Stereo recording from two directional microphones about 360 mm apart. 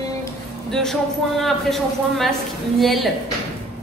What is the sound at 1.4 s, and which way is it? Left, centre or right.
A woman's voice, centre.